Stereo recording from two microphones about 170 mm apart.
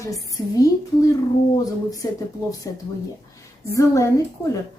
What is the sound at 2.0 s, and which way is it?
A woman's voice, 20° left (ahead or behind).